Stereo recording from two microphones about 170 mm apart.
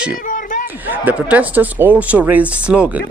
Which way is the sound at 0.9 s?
10° right (ahead or behind).